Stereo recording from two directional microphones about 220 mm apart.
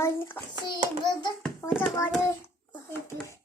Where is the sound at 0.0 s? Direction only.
10° left (ahead or behind).